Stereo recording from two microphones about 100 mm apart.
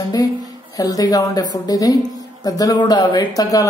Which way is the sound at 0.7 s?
40° left (ahead or behind).